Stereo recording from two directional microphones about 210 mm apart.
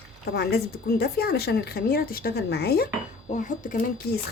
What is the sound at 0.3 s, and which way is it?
Speech, 50° left (ahead or behind).